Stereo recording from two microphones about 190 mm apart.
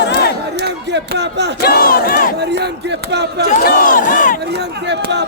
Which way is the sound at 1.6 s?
55° left (ahead or behind).